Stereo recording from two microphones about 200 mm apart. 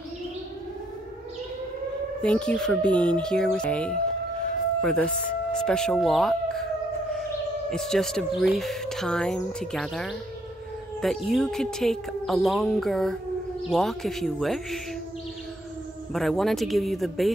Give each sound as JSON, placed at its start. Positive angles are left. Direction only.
{"t": 2.2, "sound": "speech", "side_deg": 5}
{"t": 7.7, "sound": "speech", "side_deg": 0}
{"t": 16.1, "sound": "speech", "side_deg": 0}